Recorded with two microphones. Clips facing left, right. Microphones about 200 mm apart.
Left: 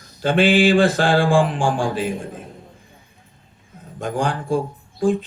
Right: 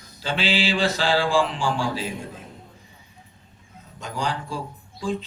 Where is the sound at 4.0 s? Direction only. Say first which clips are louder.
Left 6 dB; 55° left (ahead or behind).